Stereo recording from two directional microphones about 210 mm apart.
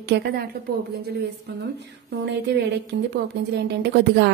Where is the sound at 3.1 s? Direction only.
55° right (ahead or behind).